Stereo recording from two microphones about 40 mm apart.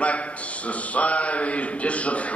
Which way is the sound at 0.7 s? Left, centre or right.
Left.